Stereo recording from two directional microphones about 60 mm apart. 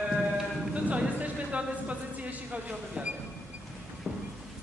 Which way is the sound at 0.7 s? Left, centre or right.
Right.